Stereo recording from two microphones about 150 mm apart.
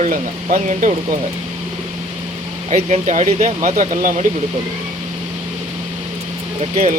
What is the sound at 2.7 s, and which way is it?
Speech, 50° right (ahead or behind).